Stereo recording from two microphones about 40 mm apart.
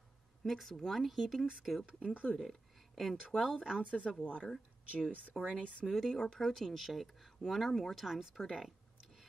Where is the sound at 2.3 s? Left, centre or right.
Centre.